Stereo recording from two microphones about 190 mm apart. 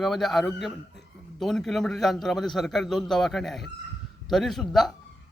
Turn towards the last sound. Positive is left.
turn(degrees=0)  # may be behind; listen again after turning